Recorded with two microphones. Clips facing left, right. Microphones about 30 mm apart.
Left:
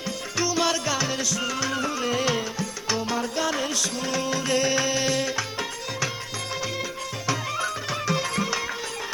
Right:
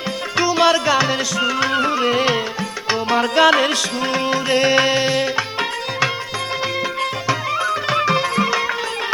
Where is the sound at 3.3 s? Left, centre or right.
Right.